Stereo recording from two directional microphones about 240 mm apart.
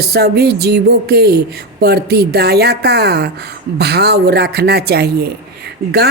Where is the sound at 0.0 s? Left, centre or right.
Right.